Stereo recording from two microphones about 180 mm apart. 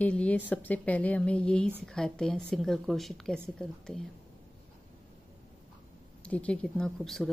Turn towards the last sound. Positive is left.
turn(degrees=0)  # may be behind; listen again after turning